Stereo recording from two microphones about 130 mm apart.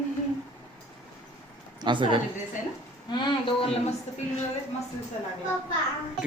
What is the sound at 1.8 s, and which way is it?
Speech, 40° right (ahead or behind).